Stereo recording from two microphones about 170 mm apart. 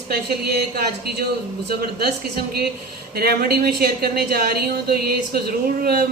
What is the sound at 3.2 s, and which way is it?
A woman's voice, 65° right (ahead or behind).